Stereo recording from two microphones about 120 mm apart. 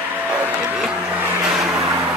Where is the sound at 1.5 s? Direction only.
Centre (ahead or behind).